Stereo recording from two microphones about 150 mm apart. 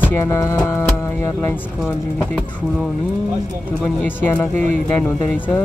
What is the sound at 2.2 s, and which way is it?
Speech, 5° left (ahead or behind).